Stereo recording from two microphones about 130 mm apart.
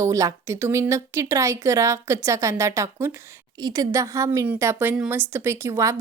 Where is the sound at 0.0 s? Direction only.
25° right (ahead or behind).